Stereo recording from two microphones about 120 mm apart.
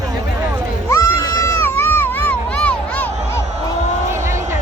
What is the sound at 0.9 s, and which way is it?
Goat, 25° left (ahead or behind).